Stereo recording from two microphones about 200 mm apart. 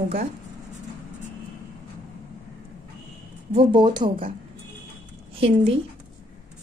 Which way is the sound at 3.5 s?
25° right (ahead or behind).